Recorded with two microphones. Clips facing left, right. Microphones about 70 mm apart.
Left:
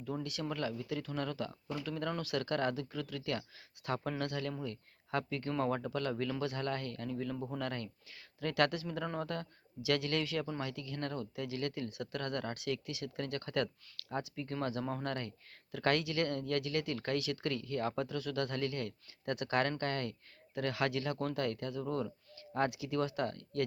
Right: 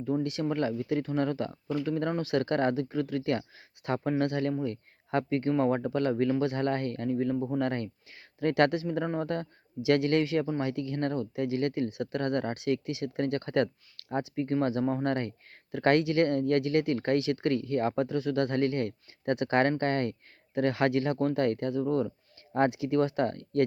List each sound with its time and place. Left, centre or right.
0.0 s speech: right
7.3 s speech: centre
7.6 s speech: right